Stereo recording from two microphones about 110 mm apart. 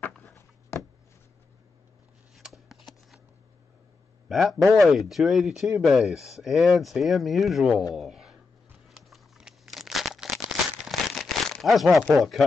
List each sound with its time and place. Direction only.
0.2 s a sound: 25° left (ahead or behind)
2.3 s shuffling cards: centre (ahead or behind)
4.3 s a man's voice: centre (ahead or behind)
8.8 s a sound: centre (ahead or behind)
10.9 s crumpling: centre (ahead or behind)
12.1 s speech: centre (ahead or behind)